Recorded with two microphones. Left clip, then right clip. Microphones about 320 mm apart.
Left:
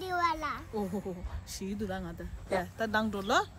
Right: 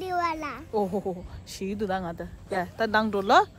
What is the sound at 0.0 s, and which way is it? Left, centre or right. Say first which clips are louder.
A child's voice: right 3 dB; centre.